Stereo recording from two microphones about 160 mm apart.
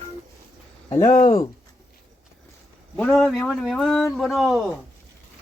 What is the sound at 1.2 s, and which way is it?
Speech, 25° left (ahead or behind).